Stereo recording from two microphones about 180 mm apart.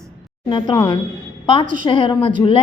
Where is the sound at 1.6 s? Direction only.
50° right (ahead or behind).